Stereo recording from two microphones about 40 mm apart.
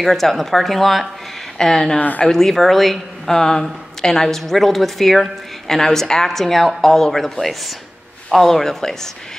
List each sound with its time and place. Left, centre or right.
0.0 s a woman's voice: centre
2.0 s speech: left
2.2 s a woman's voice: centre